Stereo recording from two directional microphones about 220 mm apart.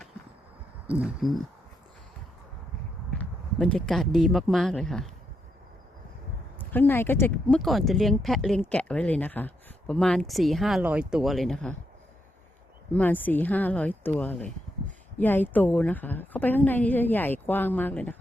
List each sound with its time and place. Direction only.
0.9 s speech: 5° right (ahead or behind)
3.1 s speech: 5° left (ahead or behind)
6.6 s speech: 10° left (ahead or behind)
12.9 s a woman's voice: 5° left (ahead or behind)